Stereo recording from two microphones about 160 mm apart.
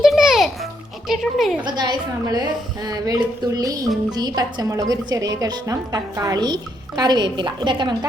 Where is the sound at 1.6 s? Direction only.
25° right (ahead or behind).